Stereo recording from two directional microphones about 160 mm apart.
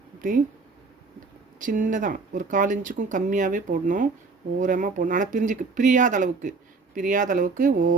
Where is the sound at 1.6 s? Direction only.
55° right (ahead or behind).